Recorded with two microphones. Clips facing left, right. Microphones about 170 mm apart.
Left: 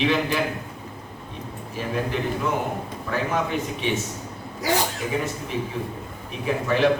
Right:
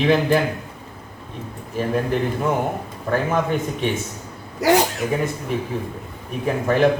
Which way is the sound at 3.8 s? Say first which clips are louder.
Right 2 dB; 50° right (ahead or behind).